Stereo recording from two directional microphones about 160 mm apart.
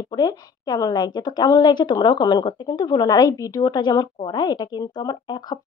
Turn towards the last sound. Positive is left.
turn(degrees=25)  # may be behind; listen again after turning